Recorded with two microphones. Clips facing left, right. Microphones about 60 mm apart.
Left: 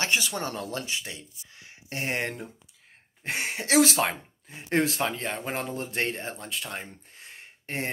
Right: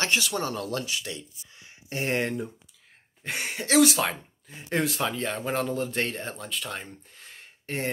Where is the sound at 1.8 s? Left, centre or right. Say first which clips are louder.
Right 2 dB; centre.